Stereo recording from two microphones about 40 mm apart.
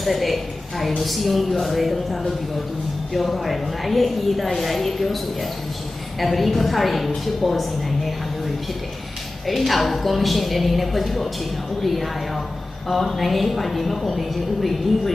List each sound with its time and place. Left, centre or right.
0.0 s a woman's voice: centre